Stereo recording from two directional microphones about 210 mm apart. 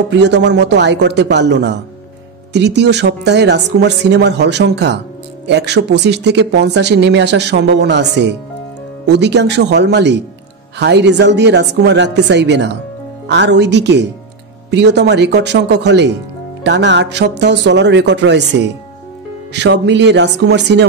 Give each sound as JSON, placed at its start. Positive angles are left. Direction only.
{"t": 0.1, "sound": "speech", "side_deg": -55}